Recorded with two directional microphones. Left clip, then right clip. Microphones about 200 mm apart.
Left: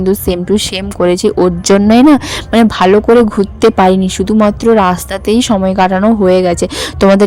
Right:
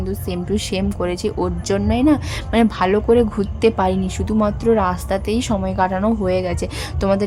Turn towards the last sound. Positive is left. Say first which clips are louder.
# left 11 dB
turn(degrees=45)  # may be behind; listen again after turning